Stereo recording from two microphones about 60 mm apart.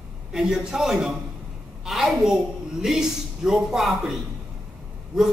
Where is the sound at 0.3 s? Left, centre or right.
Centre.